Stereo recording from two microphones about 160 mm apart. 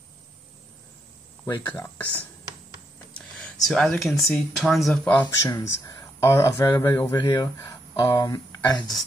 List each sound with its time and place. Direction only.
1.7 s speech: 10° left (ahead or behind)
3.3 s speech: 5° left (ahead or behind)
5.4 s speech: 20° left (ahead or behind)